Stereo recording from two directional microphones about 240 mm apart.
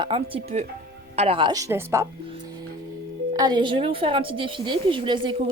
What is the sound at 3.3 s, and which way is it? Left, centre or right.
A woman's voice, centre.